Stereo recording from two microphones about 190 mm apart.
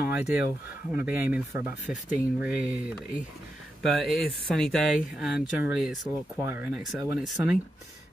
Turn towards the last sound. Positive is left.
turn(degrees=-5)  # may be behind; listen again after turning